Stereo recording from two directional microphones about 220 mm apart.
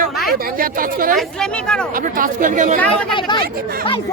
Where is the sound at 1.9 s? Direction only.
40° right (ahead or behind).